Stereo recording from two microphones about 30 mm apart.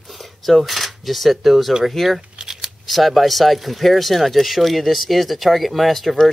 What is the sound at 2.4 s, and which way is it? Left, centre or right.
Shuffling cards, right.